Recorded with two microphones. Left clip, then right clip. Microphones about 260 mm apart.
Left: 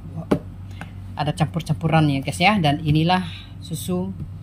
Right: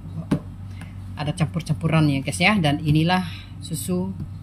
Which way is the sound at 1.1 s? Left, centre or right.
Centre.